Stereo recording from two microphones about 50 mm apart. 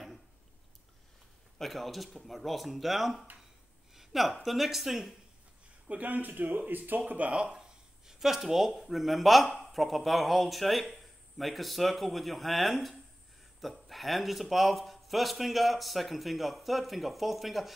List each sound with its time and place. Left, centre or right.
1.6 s speech: centre
5.9 s speech: right
8.1 s speech: centre